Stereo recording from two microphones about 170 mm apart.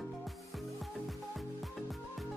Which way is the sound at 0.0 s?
Centre (ahead or behind).